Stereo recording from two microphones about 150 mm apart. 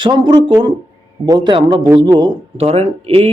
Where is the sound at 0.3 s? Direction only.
25° right (ahead or behind).